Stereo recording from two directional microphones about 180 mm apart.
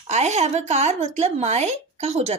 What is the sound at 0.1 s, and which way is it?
A woman's voice, 40° right (ahead or behind).